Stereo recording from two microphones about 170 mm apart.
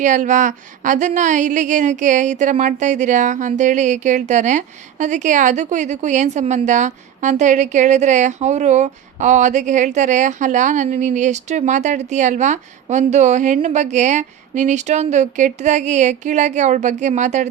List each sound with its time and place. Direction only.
0.0 s speech: 45° right (ahead or behind)